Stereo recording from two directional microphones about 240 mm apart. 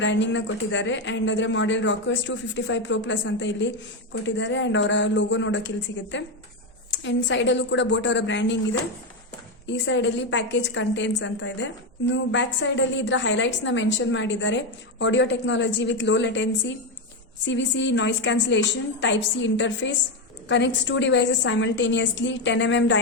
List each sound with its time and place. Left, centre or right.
0.0 s a woman's voice: left
9.6 s a woman's voice: left